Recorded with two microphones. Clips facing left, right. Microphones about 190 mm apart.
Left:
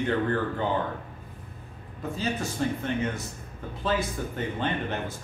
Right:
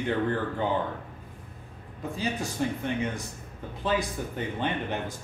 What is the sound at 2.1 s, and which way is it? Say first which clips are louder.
Speech: left 1 dB; 15° right (ahead or behind).